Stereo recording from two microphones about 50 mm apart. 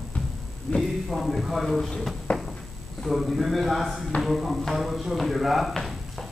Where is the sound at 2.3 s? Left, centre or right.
Left.